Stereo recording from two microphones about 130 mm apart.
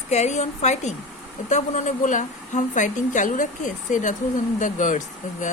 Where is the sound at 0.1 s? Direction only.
60° left (ahead or behind).